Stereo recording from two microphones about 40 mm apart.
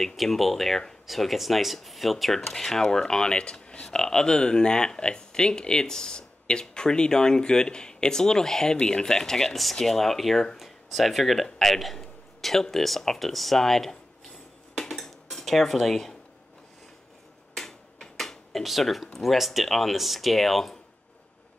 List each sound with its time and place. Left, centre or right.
0.0 s speech: centre; by 3.9 s left
3.9 s speech: centre
14.8 s cutlery: centre
17.6 s a sound: centre
19.1 s speech: centre